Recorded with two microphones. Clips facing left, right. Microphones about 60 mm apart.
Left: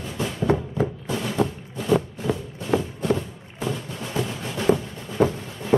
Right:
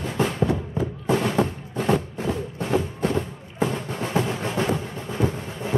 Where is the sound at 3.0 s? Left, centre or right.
Right.